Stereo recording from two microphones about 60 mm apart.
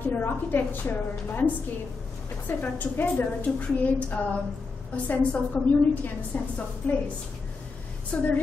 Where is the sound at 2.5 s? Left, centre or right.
Left.